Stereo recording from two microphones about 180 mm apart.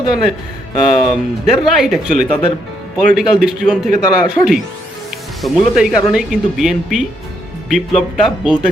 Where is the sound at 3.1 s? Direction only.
5° right (ahead or behind).